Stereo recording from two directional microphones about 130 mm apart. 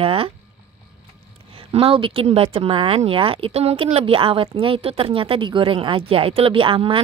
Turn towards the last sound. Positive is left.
turn(degrees=-40)  # may be behind; listen again after turning